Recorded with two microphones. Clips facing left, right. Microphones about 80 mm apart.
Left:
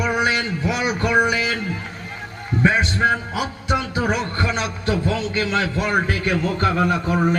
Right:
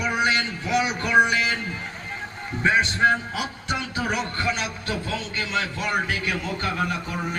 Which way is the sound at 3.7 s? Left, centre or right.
Left.